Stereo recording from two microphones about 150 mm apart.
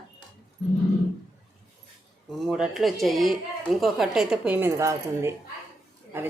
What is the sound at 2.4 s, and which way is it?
A woman's voice, 5° right (ahead or behind).